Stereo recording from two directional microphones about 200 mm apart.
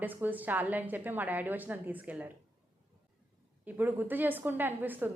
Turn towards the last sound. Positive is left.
turn(degrees=-10)  # may be behind; listen again after turning